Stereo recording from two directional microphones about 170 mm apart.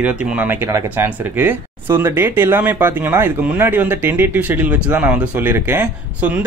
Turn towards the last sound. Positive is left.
turn(degrees=-10)  # may be behind; listen again after turning